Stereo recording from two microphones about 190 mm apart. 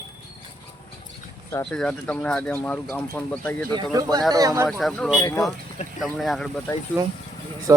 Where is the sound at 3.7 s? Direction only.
20° right (ahead or behind).